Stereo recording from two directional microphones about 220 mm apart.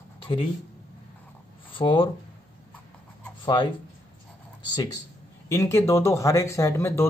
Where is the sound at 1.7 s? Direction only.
20° left (ahead or behind).